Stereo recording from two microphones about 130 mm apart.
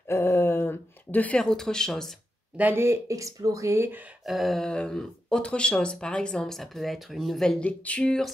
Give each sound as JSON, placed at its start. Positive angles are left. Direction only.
{"t": 0.1, "sound": "a sound", "side_deg": 20}
{"t": 2.5, "sound": "speech", "side_deg": -15}
{"t": 4.3, "sound": "speech", "side_deg": 0}